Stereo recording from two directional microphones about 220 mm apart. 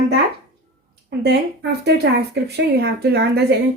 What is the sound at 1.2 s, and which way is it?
A woman's voice, 50° right (ahead or behind).